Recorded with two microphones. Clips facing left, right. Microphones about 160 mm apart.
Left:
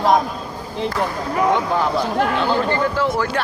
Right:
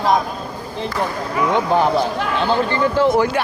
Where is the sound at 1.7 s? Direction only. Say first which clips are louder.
Right 3 dB; 20° right (ahead or behind).